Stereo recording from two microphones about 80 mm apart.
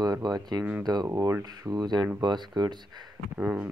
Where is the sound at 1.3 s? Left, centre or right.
Right.